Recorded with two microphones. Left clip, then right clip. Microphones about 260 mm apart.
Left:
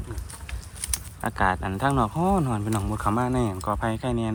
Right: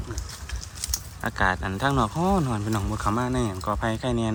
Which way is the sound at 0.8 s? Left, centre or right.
Left.